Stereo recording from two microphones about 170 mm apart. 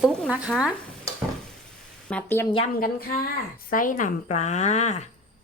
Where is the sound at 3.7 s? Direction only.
50° left (ahead or behind).